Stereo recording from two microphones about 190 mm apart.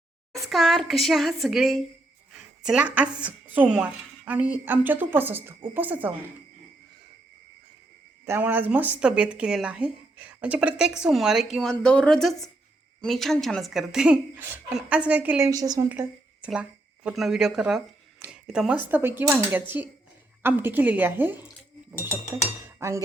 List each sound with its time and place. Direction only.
0.4 s a woman's voice: centre (ahead or behind)
8.3 s speech: 10° right (ahead or behind)
15.9 s a woman's voice: 5° right (ahead or behind)